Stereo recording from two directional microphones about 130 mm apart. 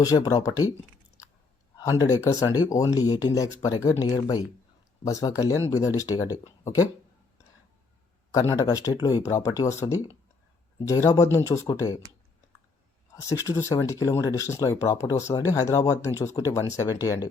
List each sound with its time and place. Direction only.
0.0 s speech: 30° left (ahead or behind)
1.8 s speech: 30° left (ahead or behind)
8.3 s speech: 25° left (ahead or behind)
13.1 s speech: 25° left (ahead or behind)